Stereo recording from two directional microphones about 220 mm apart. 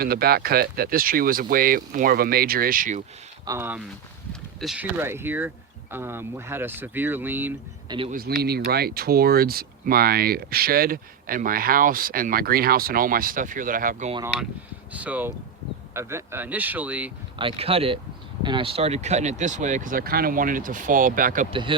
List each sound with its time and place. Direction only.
0.0 s speech: 45° right (ahead or behind)
3.4 s speech: 10° right (ahead or behind)
7.9 s a man's voice: 25° right (ahead or behind)
8.1 s speech: 45° right (ahead or behind)
14.9 s speech: 5° right (ahead or behind)
17.3 s speech: 25° right (ahead or behind)
21.5 s speech: 25° right (ahead or behind)